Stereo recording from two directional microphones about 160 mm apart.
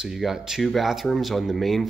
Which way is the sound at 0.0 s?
Centre (ahead or behind).